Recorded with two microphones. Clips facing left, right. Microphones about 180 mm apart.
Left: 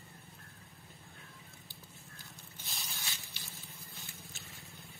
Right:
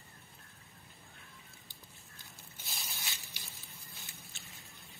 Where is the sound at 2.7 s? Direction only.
15° right (ahead or behind).